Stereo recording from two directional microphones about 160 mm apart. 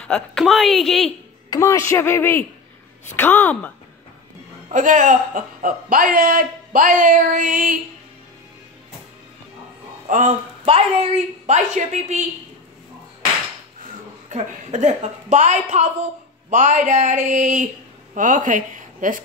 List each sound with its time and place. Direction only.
0.0 s a woman's voice: 5° left (ahead or behind)
1.5 s speech: 20° left (ahead or behind)
4.6 s a man's voice: 50° right (ahead or behind)
10.0 s speech: 50° right (ahead or behind)
10.6 s a woman's voice: 40° right (ahead or behind)
14.3 s a woman's voice: 45° right (ahead or behind)